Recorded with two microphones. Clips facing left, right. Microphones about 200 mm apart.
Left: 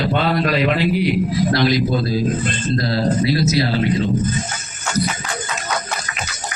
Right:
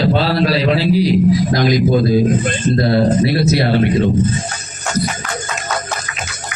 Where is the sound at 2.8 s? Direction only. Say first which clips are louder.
Right 5 dB; 60° right (ahead or behind).